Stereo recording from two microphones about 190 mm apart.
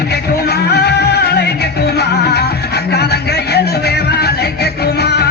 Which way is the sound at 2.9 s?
60° left (ahead or behind).